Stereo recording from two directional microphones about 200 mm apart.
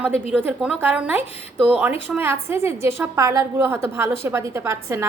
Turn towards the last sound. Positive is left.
turn(degrees=-15)  # may be behind; listen again after turning